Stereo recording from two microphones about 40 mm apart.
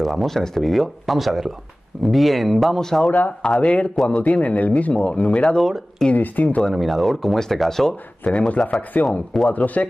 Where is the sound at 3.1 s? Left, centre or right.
Left.